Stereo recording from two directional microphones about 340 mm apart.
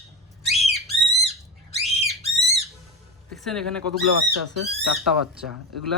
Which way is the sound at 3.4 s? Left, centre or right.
Centre.